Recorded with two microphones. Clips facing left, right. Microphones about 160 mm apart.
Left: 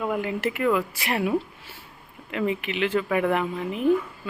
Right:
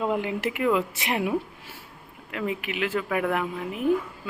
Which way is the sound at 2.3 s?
5° right (ahead or behind).